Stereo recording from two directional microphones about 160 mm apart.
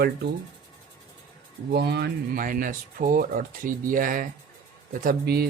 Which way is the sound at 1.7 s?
90° right.